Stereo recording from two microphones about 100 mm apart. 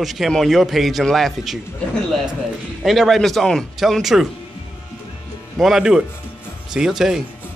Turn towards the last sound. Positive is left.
turn(degrees=-5)  # may be behind; listen again after turning